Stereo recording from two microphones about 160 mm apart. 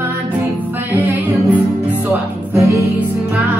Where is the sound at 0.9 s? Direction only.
10° right (ahead or behind).